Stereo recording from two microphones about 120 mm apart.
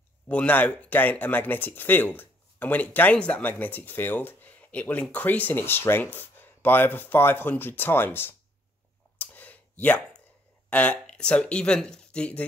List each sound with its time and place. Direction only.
0.3 s speech: 15° left (ahead or behind)
9.2 s clicking: 15° left (ahead or behind)
10.7 s speech: 10° left (ahead or behind)